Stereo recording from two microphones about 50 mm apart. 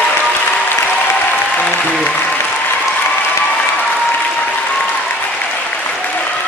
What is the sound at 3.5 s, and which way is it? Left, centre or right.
Applause, left.